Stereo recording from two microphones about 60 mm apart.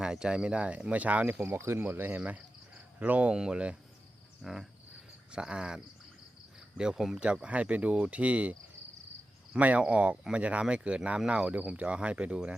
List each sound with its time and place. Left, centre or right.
0.0 s speech: centre; by 1.5 s right
1.5 s speech: right
1.8 s speech: right
3.3 s speech: centre
4.4 s cricket: centre
5.3 s speech: centre
9.6 s speech: right